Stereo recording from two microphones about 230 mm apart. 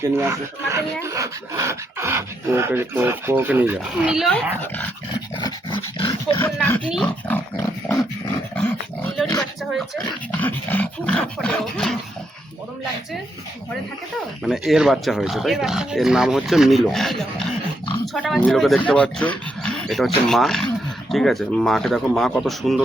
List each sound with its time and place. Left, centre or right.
0.2 s speech: centre
5.1 s dog: left
6.4 s speech: centre
9.4 s speech: centre
14.4 s speech: centre